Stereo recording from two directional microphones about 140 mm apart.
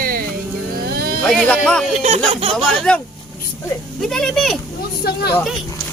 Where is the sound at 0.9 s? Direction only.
90° right.